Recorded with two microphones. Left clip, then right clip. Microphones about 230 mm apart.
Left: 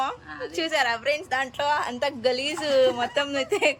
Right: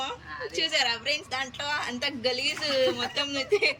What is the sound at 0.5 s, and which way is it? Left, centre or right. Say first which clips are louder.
A woman's voice: left 2 dB; centre.